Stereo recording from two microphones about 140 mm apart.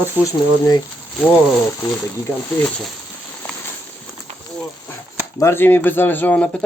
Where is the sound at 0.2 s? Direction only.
25° left (ahead or behind).